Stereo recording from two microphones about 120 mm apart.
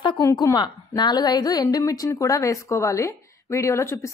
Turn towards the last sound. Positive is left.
turn(degrees=25)  # may be behind; listen again after turning